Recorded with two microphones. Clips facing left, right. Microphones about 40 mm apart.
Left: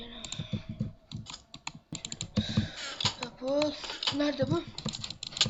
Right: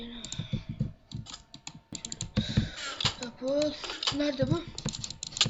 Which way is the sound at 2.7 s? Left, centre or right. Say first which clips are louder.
Right 1 dB; right.